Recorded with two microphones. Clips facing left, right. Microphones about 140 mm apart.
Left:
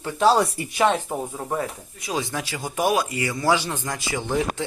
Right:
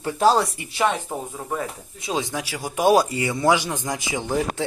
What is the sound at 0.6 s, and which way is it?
Speech, 40° left (ahead or behind).